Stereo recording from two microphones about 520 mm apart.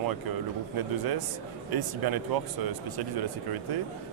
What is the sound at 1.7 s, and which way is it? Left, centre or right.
Speech, right.